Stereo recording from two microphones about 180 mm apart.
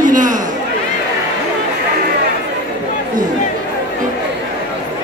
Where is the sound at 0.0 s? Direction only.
45° right (ahead or behind).